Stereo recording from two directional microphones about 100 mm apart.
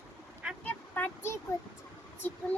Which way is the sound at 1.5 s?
35° left (ahead or behind).